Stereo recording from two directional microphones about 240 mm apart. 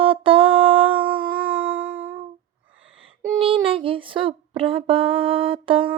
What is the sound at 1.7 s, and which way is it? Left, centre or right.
Music, centre.